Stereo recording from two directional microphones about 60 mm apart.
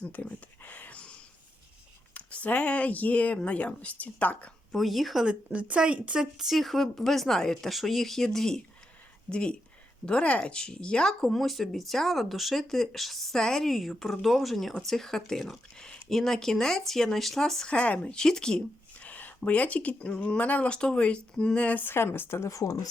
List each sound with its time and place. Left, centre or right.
0.0 s a sound: left
2.1 s speech: left
4.7 s speech: centre
5.2 s speech: centre
6.4 s speech: centre
17.7 s speech: left
18.2 s speech: centre
18.9 s a sound: left
19.4 s speech: left
21.8 s a woman's voice: left
22.4 s speech: left